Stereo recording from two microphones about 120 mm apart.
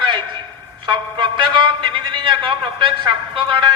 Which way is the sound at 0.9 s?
40° right (ahead or behind).